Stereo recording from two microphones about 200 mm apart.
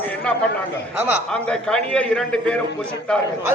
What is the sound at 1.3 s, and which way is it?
A man's voice, 5° left (ahead or behind).